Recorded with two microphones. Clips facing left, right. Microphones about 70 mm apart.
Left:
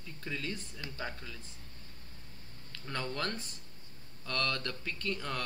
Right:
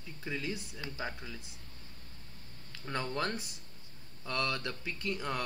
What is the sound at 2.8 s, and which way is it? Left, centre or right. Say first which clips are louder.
Speech: right 2 dB; centre.